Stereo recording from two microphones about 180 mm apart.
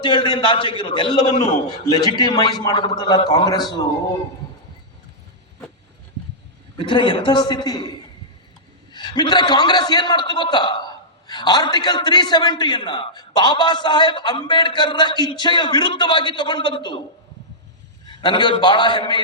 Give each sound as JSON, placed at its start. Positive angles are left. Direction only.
{"t": 0.0, "sound": "a man's voice", "side_deg": 25}
{"t": 6.7, "sound": "a man's voice", "side_deg": 25}
{"t": 18.0, "sound": "a man's voice", "side_deg": 25}